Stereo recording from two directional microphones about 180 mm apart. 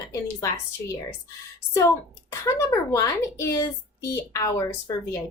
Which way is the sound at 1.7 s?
15° left (ahead or behind).